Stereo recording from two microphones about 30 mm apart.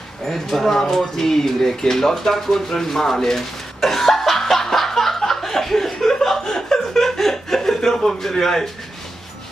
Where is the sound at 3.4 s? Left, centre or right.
Centre.